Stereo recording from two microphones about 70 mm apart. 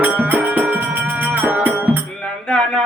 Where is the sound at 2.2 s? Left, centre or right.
Centre.